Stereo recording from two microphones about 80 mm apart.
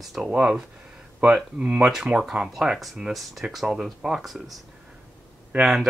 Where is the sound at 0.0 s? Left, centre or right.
Centre.